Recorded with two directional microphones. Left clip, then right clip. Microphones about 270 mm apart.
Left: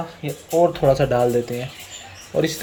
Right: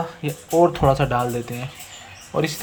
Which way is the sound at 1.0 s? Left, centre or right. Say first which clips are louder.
Left 3 dB; right.